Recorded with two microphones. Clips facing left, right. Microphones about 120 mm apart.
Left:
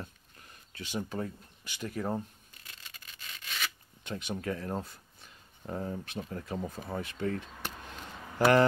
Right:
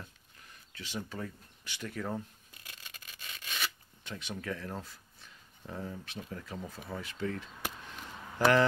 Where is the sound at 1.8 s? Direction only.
30° left (ahead or behind).